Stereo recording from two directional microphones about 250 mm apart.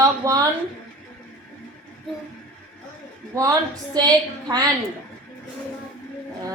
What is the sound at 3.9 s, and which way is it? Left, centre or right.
Speech, centre.